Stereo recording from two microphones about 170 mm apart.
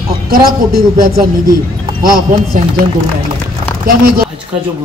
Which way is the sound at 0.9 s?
55° right (ahead or behind).